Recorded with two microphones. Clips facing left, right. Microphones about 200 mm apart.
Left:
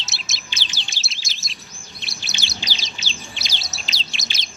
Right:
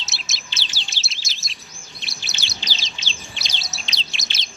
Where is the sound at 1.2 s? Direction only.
Centre (ahead or behind).